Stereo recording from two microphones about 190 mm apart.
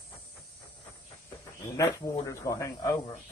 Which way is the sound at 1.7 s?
15° left (ahead or behind).